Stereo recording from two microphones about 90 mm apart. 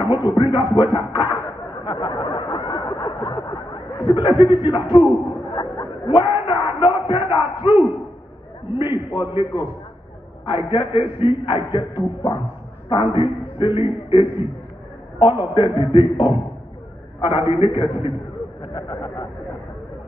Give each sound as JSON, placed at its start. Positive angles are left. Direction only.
{"t": 0.3, "sound": "speech", "side_deg": 65}
{"t": 1.9, "sound": "a sound", "side_deg": 60}
{"t": 4.6, "sound": "speech", "side_deg": 60}
{"t": 5.1, "sound": "a sound", "side_deg": 60}
{"t": 7.2, "sound": "battle cry", "side_deg": 65}
{"t": 9.1, "sound": "a man's voice", "side_deg": 65}
{"t": 14.2, "sound": "a man's voice", "side_deg": -25}
{"t": 15.1, "sound": "a man's voice", "side_deg": 70}
{"t": 17.5, "sound": "a man's voice", "side_deg": 65}
{"t": 18.6, "sound": "speech", "side_deg": 55}